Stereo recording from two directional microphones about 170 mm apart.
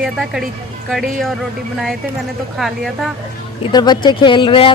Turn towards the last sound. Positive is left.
turn(degrees=30)  # may be behind; listen again after turning